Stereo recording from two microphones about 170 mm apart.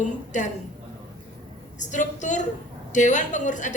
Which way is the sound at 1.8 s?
45° left (ahead or behind).